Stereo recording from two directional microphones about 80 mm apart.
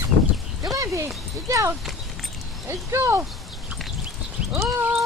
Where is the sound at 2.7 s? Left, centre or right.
Right.